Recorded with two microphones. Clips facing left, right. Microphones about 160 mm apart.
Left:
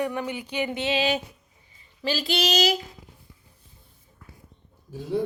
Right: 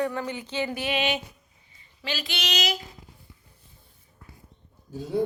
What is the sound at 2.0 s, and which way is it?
Female singing, 35° left (ahead or behind).